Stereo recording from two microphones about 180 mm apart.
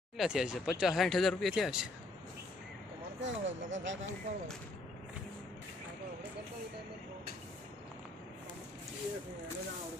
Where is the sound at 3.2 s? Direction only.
90° right.